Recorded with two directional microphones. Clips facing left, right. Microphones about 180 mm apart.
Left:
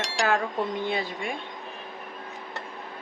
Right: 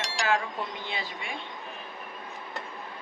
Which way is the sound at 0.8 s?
50° left (ahead or behind).